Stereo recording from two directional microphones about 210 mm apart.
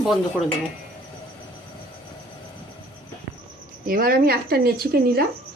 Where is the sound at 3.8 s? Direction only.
45° right (ahead or behind).